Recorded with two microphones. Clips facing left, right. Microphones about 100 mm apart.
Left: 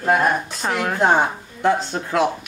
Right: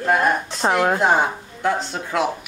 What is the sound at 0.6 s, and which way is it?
Speech, 30° right (ahead or behind).